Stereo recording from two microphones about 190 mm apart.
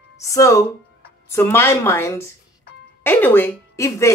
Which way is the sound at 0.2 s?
15° left (ahead or behind).